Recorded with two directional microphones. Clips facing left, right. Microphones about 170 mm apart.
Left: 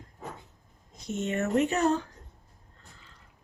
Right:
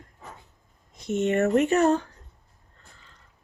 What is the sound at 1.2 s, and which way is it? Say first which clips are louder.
Speech: right 5 dB; 55° right (ahead or behind).